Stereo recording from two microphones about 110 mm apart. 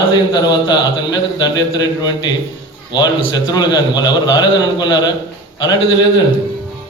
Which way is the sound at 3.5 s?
40° left (ahead or behind).